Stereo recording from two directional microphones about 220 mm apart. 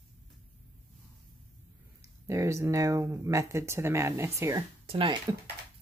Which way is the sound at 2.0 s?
15° right (ahead or behind).